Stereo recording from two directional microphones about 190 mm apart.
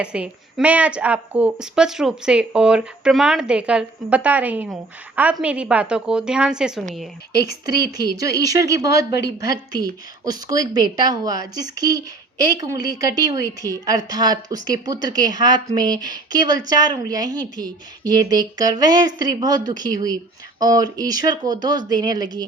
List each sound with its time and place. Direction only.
0.0 s a woman's voice: 5° right (ahead or behind)
7.3 s speech: 55° left (ahead or behind)
7.6 s speech: 20° right (ahead or behind)
9.1 s speech: 55° left (ahead or behind)
9.8 s speech: 20° right (ahead or behind)